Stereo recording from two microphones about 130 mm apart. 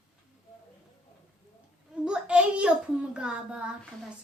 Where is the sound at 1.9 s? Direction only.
5° right (ahead or behind).